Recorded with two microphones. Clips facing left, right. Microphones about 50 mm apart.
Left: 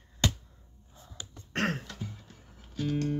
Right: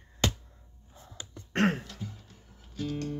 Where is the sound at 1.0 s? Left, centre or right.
Right.